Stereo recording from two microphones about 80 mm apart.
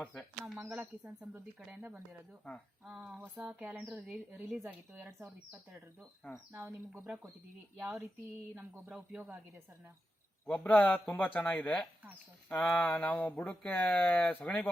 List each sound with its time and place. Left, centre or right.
0.6 s a woman's voice: centre
2.8 s speech: centre
3.2 s a woman's voice: centre
6.5 s a woman's voice: right
7.8 s speech: centre
10.4 s speech: centre